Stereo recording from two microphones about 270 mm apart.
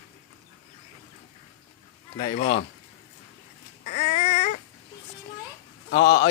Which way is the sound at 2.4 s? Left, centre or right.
Left.